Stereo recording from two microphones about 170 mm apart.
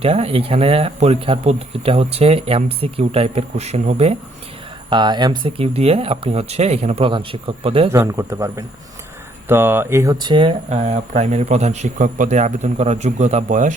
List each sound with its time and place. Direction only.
0.0 s speech: 35° right (ahead or behind)
4.9 s speech: 25° right (ahead or behind)
7.9 s speech: 15° right (ahead or behind)
10.7 s a man's voice: 40° right (ahead or behind)